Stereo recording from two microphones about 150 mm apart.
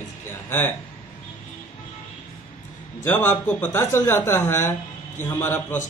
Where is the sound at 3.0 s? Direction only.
15° left (ahead or behind).